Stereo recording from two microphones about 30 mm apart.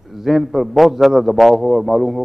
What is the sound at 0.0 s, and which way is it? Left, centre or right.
A man's voice, centre.